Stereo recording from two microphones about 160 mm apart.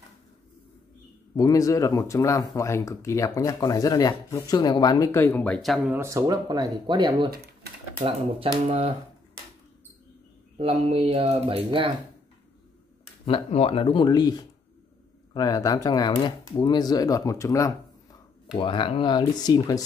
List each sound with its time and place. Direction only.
1.3 s speech: 20° left (ahead or behind); by 5.8 s 5° left (ahead or behind)
5.9 s speech: 15° right (ahead or behind); by 8.9 s 35° right (ahead or behind)
10.6 s speech: 40° right (ahead or behind)
13.2 s speech: 40° left (ahead or behind); by 17.7 s 20° left (ahead or behind)
18.5 s speech: 30° left (ahead or behind)